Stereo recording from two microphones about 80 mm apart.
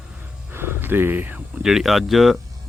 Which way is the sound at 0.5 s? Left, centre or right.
Right.